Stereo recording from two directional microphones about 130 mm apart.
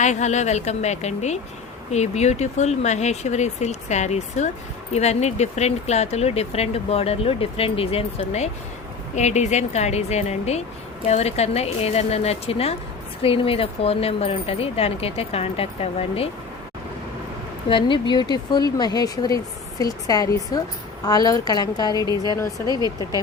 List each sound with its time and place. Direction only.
0.0 s speech: 65° left (ahead or behind)
17.7 s a woman's voice: 40° left (ahead or behind)
21.9 s a woman's voice: 30° right (ahead or behind)